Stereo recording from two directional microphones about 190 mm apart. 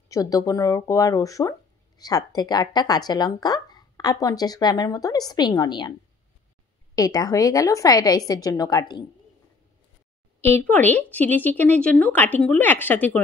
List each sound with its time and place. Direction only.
0.1 s speech: 20° left (ahead or behind)
7.0 s speech: 20° left (ahead or behind)
10.5 s speech: 10° left (ahead or behind)